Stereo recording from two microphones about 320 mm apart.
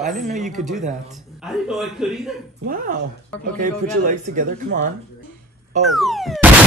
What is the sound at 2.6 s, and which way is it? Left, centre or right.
Speech, right.